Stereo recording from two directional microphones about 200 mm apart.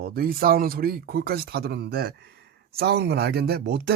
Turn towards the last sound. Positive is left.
turn(degrees=-55)  # may be behind; listen again after turning